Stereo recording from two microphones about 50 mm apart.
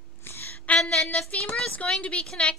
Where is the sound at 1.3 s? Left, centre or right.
Left.